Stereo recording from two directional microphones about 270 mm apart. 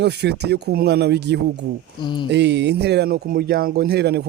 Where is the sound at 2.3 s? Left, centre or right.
Right.